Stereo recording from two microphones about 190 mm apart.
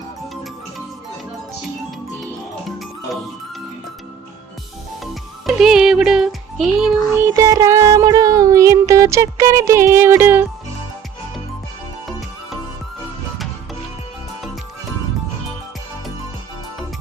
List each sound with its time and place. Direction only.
2.6 s music: centre (ahead or behind)
5.5 s music: centre (ahead or behind)
7.3 s music: 20° right (ahead or behind)